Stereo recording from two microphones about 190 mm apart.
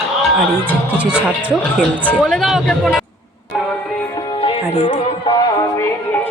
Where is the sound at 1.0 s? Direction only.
5° right (ahead or behind).